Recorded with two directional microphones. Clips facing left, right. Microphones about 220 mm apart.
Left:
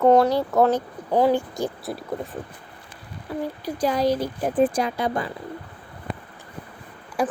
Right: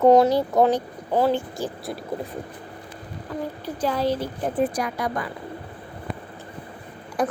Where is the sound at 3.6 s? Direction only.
15° left (ahead or behind).